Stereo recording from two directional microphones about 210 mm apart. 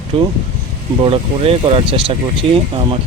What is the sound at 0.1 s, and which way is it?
Speech, 25° right (ahead or behind).